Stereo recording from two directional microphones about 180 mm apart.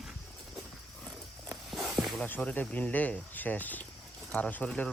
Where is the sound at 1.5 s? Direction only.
Centre (ahead or behind).